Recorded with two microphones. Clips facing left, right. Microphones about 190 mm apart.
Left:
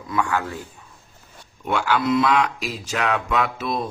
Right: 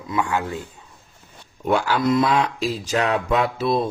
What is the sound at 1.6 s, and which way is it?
Speech, 35° right (ahead or behind).